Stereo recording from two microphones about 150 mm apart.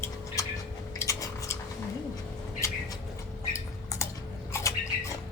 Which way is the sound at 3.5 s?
20° left (ahead or behind).